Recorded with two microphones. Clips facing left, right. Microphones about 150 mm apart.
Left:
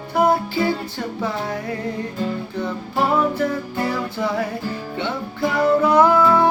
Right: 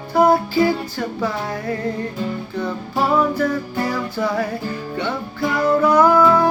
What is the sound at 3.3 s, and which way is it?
Music, 25° left (ahead or behind).